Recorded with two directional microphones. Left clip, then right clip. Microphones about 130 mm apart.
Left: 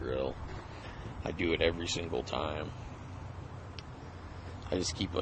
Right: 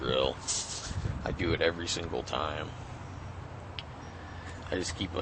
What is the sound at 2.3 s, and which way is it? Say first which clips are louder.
Speech: right 5 dB; 45° left (ahead or behind).